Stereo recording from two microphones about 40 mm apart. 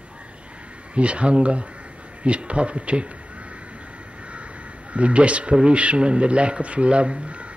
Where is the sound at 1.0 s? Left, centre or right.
Right.